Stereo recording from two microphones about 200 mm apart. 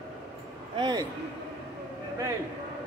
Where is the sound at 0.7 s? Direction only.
20° right (ahead or behind).